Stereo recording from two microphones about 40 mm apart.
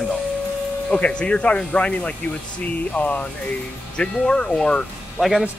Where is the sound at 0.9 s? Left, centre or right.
Left.